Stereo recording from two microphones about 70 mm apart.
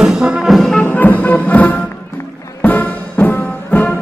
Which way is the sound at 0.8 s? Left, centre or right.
Left.